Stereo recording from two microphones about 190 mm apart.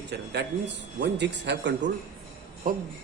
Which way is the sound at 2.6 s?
45° right (ahead or behind).